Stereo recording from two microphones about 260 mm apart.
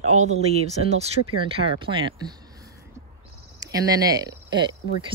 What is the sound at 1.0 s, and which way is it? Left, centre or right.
Speech, right.